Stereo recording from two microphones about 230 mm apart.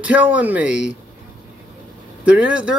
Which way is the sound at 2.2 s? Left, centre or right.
Centre.